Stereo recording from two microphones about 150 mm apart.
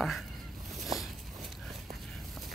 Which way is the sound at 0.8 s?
Centre (ahead or behind).